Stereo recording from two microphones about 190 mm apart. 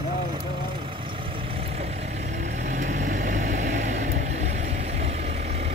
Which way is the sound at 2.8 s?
40° right (ahead or behind).